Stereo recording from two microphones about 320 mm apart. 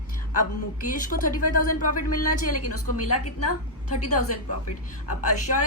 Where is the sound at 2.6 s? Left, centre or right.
Left.